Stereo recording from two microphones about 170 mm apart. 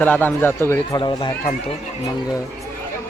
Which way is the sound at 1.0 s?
25° left (ahead or behind).